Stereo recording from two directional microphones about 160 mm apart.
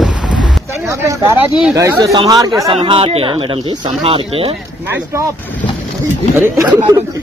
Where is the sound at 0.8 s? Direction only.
15° right (ahead or behind).